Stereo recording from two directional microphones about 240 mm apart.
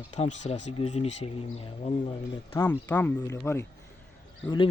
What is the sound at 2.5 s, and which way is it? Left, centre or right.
Speech, centre.